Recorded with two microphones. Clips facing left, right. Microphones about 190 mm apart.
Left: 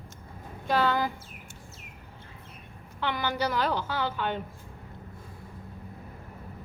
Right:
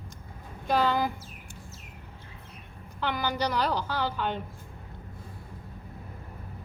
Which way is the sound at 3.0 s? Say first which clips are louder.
Even; 5° left (ahead or behind).